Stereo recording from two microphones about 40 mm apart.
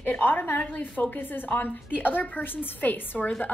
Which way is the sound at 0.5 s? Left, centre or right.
Left.